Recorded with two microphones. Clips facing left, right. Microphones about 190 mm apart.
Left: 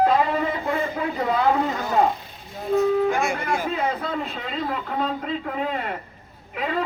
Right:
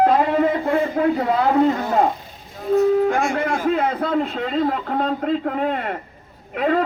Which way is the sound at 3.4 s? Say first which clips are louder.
Right 5 dB; 55° right (ahead or behind).